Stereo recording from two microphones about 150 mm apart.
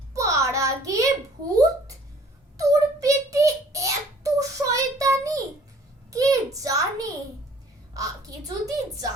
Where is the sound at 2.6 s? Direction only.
20° right (ahead or behind).